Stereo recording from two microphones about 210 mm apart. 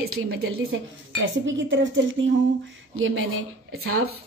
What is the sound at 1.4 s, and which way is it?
Speech, 65° right (ahead or behind).